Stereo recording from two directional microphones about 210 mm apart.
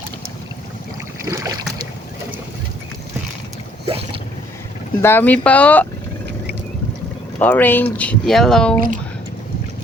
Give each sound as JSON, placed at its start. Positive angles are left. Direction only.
{"t": 1.2, "sound": "boat", "side_deg": -15}
{"t": 3.8, "sound": "boat", "side_deg": -25}
{"t": 5.0, "sound": "speech", "side_deg": 10}
{"t": 7.3, "sound": "speech", "side_deg": 10}